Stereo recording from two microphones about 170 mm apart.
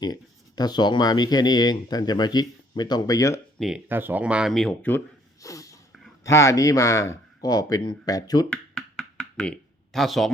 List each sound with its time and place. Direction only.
0.0 s speech: 25° left (ahead or behind)
3.6 s speech: 10° right (ahead or behind); by 8.4 s 20° left (ahead or behind)
8.4 s a sound: 5° left (ahead or behind)